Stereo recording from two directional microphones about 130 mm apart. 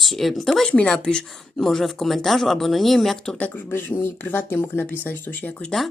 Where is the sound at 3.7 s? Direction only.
20° left (ahead or behind).